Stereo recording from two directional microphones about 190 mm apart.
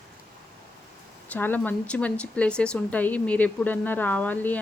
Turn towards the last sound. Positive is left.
turn(degrees=10)  # may be behind; listen again after turning